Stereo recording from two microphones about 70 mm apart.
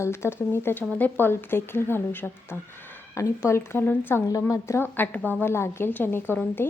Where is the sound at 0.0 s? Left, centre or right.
Left.